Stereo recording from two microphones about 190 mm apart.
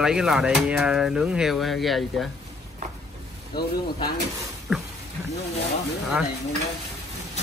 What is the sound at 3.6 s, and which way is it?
Speech, 25° left (ahead or behind).